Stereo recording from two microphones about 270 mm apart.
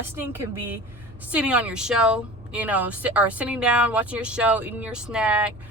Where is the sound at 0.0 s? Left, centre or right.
Centre.